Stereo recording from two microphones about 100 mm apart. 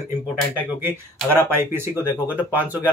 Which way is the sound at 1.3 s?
25° right (ahead or behind).